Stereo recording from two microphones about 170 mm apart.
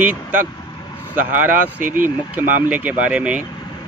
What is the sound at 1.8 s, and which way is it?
Speech, 55° right (ahead or behind).